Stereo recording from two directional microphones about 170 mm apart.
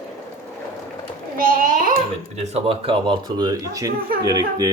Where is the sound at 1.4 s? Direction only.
55° right (ahead or behind).